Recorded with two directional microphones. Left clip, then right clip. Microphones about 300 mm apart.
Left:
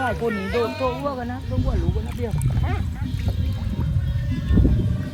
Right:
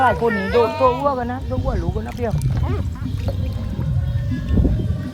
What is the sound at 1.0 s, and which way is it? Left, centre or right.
Speech, right.